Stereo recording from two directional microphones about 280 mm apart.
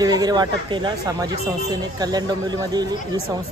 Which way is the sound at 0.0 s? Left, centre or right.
Centre.